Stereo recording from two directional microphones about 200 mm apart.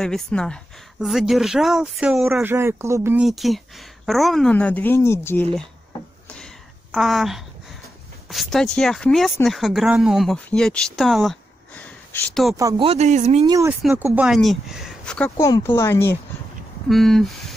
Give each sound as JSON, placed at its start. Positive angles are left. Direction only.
{"t": 0.0, "sound": "speech", "side_deg": 5}
{"t": 3.3, "sound": "speech", "side_deg": 0}
{"t": 6.2, "sound": "a sound", "side_deg": 5}
{"t": 8.3, "sound": "speech", "side_deg": 0}
{"t": 12.5, "sound": "speech", "side_deg": -15}
{"t": 12.8, "sound": "speech", "side_deg": -35}
{"t": 13.5, "sound": "speech", "side_deg": -15}
{"t": 14.1, "sound": "speech", "side_deg": 0}
{"t": 16.9, "sound": "speech", "side_deg": 0}